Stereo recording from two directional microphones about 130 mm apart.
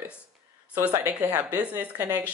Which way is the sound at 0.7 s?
15° right (ahead or behind).